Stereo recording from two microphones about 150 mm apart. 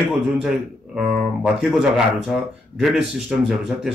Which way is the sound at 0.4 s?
5° right (ahead or behind).